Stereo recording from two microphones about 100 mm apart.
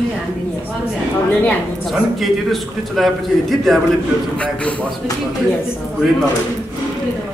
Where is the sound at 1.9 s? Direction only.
Centre (ahead or behind).